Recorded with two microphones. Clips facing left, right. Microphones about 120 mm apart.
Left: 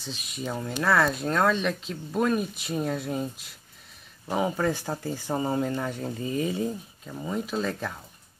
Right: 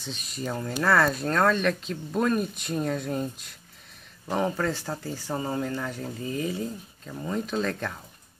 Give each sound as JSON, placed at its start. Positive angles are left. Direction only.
{"t": 0.0, "sound": "speech", "side_deg": 0}
{"t": 7.1, "sound": "speech", "side_deg": 5}